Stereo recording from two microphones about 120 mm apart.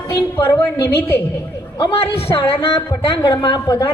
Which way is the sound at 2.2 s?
50° left (ahead or behind).